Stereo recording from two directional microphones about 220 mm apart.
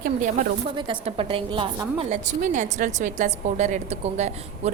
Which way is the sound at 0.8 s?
25° right (ahead or behind).